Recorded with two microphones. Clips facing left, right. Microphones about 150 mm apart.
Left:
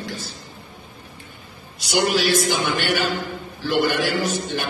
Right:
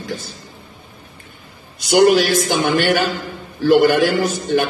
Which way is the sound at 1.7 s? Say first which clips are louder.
Right 9 dB; 50° right (ahead or behind).